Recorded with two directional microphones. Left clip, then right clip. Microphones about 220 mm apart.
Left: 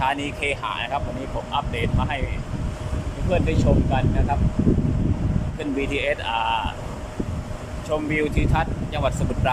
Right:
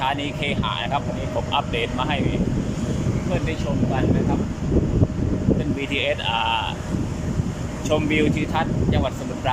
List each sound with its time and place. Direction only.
0.0 s speech: centre (ahead or behind)
1.5 s speech: centre (ahead or behind)
5.9 s speech: centre (ahead or behind)
7.9 s speech: centre (ahead or behind)